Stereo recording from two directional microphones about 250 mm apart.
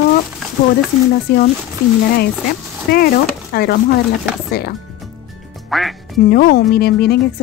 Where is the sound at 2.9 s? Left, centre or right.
Left.